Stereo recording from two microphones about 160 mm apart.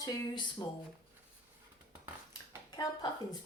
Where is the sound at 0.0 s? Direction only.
20° left (ahead or behind).